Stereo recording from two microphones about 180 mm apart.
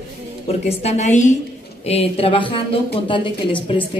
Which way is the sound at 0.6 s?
40° left (ahead or behind).